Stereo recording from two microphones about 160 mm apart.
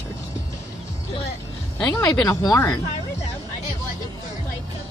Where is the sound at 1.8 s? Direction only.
10° left (ahead or behind).